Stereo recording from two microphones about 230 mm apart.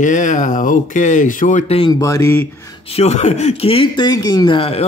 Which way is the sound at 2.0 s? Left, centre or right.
Centre.